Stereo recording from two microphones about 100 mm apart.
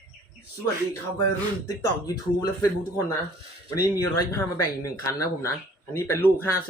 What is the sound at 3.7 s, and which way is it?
Speech, 30° left (ahead or behind).